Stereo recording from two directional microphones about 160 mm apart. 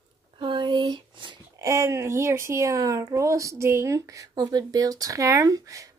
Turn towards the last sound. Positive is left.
turn(degrees=-20)  # may be behind; listen again after turning